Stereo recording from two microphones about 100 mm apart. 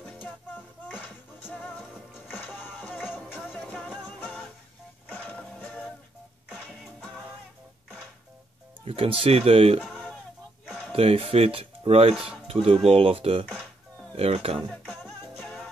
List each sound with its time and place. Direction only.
0.8 s music: 15° left (ahead or behind)
8.8 s speech: 70° right (ahead or behind)
10.9 s speech: 70° right (ahead or behind)
14.1 s speech: 80° right
14.7 s music: 10° left (ahead or behind)